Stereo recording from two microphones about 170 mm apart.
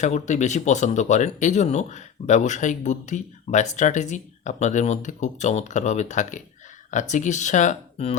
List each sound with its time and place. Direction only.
0.0 s speech: 45° left (ahead or behind)